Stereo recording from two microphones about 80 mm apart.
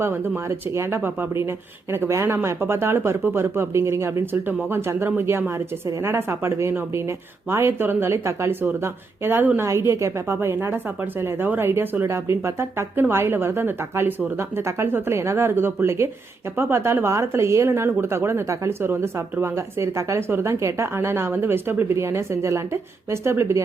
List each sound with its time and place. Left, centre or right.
0.7 s speech: right
9.6 s speech: right